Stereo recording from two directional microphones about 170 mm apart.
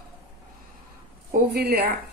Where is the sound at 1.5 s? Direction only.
70° right (ahead or behind).